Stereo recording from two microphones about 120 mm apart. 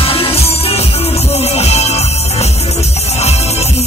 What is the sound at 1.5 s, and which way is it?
Music, 60° left (ahead or behind).